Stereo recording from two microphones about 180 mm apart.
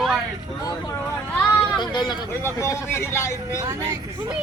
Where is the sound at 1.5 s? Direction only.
25° left (ahead or behind).